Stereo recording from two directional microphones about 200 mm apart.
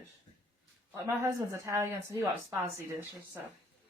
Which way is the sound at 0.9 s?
10° right (ahead or behind).